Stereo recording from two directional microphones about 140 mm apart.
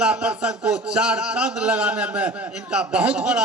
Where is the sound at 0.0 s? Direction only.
5° right (ahead or behind).